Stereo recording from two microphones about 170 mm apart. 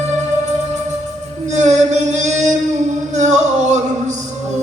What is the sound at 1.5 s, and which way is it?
Music, 45° right (ahead or behind).